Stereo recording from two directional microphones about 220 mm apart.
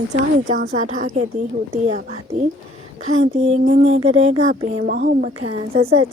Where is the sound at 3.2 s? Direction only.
30° right (ahead or behind).